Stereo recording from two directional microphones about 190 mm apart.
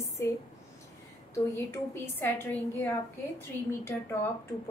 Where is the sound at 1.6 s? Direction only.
15° left (ahead or behind).